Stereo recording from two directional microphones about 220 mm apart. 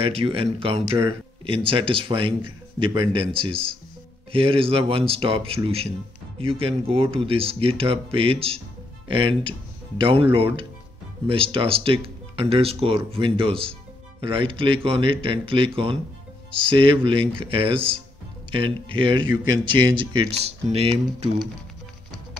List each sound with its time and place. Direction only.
0.0 s speech: 25° right (ahead or behind)